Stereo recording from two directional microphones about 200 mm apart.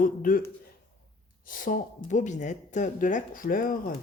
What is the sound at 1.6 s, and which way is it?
Speech, 40° left (ahead or behind).